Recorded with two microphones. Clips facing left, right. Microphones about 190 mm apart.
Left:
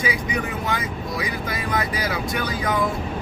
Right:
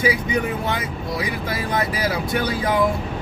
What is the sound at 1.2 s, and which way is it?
Speech, 25° right (ahead or behind).